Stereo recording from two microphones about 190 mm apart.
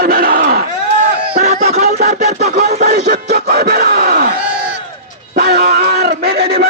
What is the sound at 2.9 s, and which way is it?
Speech, 60° right (ahead or behind).